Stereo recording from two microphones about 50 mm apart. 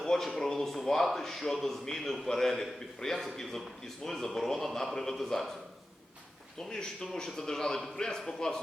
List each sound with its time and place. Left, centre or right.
0.0 s a man's voice: centre
6.6 s a man's voice: centre